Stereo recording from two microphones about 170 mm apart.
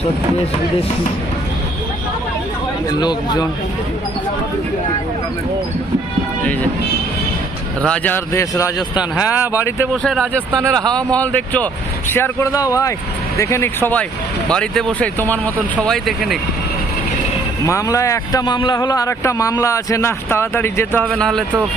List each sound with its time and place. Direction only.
3.0 s a man's voice: 25° left (ahead or behind)
7.8 s a man's voice: 10° left (ahead or behind)
9.0 s speech: 5° right (ahead or behind)
9.6 s a man's voice: 15° left (ahead or behind)
10.0 s a man's voice: 5° left (ahead or behind)
17.7 s a man's voice: 20° left (ahead or behind); by 21.4 s 5° left (ahead or behind)